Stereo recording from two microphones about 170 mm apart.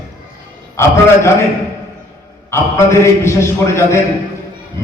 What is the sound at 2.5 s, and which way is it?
A man's voice, 15° left (ahead or behind).